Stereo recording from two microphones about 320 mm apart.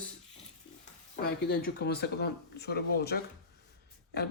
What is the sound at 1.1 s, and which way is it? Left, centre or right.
Speech, left.